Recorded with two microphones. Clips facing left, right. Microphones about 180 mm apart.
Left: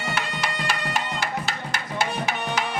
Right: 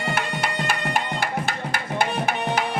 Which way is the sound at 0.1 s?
50° right (ahead or behind).